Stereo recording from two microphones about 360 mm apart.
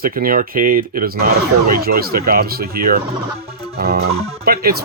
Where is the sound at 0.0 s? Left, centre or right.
Right.